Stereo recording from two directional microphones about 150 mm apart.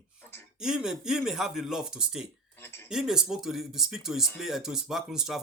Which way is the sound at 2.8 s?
5° right (ahead or behind).